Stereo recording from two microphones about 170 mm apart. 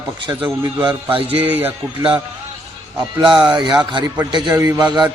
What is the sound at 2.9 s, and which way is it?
A man's voice, 25° right (ahead or behind).